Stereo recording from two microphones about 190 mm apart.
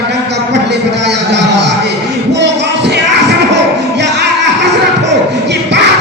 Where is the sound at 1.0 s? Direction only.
65° right (ahead or behind).